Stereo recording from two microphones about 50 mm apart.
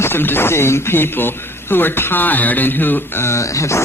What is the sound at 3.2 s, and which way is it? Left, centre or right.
Speech, left.